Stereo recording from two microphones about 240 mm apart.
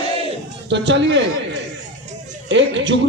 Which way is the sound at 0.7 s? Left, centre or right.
Right.